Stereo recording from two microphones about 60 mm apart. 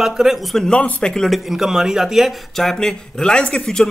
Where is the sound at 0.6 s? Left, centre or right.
Left.